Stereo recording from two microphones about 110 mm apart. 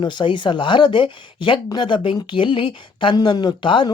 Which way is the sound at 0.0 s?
45° left (ahead or behind).